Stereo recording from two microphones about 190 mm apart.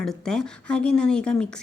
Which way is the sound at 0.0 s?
5° left (ahead or behind).